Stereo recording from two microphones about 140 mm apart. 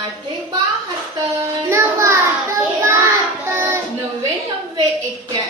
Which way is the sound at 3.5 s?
20° right (ahead or behind).